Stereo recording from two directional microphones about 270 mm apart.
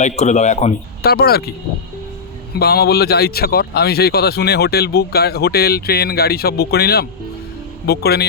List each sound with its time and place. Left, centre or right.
0.0 s speech: left
2.6 s speech: left